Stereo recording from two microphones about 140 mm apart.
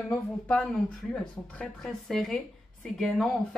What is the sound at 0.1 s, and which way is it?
A woman's voice, 10° left (ahead or behind).